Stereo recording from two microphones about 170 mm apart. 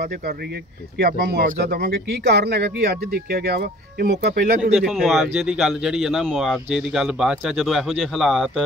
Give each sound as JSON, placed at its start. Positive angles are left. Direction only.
{"t": 0.9, "sound": "speech", "side_deg": -70}
{"t": 4.7, "sound": "speech", "side_deg": 0}